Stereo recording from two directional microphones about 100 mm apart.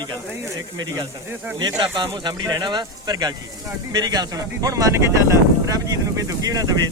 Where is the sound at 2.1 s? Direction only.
50° right (ahead or behind).